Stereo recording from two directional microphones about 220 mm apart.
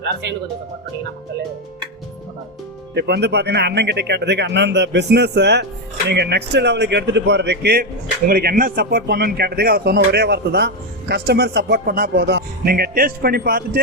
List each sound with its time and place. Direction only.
0.0 s speech: 50° right (ahead or behind)
2.9 s speech: 50° right (ahead or behind)